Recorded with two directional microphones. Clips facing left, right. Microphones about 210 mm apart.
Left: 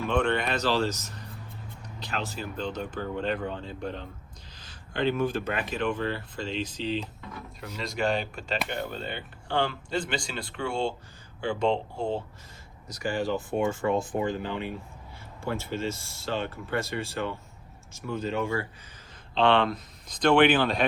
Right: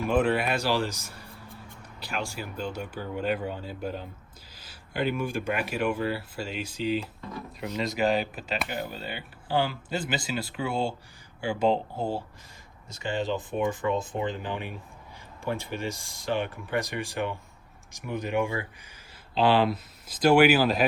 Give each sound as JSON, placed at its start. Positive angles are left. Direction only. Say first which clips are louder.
{"t": 0.0, "sound": "speech", "louder": "right 2 dB", "side_deg": -5}
{"t": 12.9, "sound": "speech", "louder": "left 1 dB", "side_deg": -25}
{"t": 19.3, "sound": "speech", "louder": "even", "side_deg": -5}